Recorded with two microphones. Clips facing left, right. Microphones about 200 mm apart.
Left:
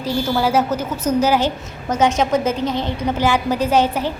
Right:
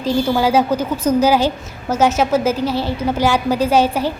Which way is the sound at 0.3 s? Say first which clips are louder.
Right 2 dB; 15° right (ahead or behind).